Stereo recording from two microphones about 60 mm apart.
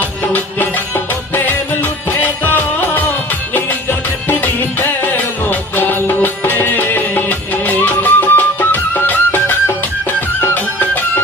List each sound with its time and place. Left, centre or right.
0.0 s music: left